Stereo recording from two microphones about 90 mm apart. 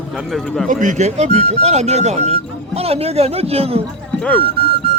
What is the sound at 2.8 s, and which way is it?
Speech, 90° right.